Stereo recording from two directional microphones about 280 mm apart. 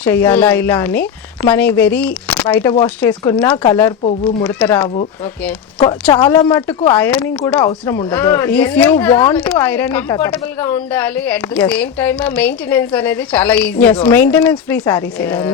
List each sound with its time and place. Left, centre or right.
0.0 s speech: centre
4.4 s speech: centre
6.1 s speech: centre